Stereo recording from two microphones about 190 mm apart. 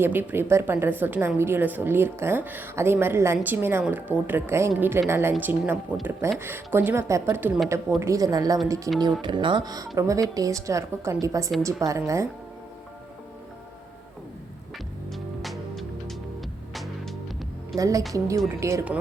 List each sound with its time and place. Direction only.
0.0 s a woman's voice: 10° right (ahead or behind)
15.1 s music: centre (ahead or behind)
17.7 s a woman's voice: 15° right (ahead or behind)